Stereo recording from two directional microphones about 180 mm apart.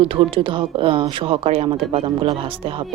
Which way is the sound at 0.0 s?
30° right (ahead or behind).